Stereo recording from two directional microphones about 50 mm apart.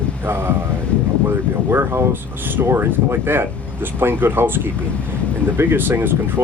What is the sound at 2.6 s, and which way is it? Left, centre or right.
Speech, right.